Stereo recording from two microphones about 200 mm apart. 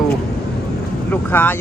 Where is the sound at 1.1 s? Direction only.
10° left (ahead or behind).